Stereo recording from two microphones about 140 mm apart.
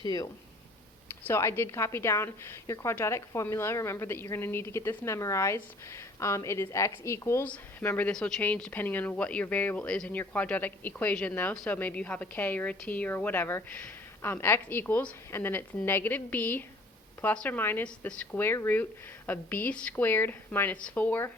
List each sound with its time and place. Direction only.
0.0 s a woman's voice: 30° left (ahead or behind)
1.3 s a woman's voice: 20° left (ahead or behind)